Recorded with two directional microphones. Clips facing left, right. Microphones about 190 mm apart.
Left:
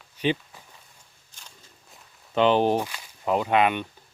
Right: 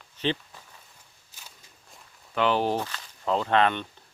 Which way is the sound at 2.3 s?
20° left (ahead or behind).